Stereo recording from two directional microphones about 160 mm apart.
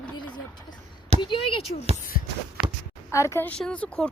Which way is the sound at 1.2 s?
30° left (ahead or behind).